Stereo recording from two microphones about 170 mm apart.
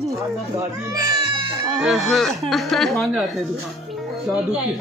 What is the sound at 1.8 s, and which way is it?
Speech, centre (ahead or behind).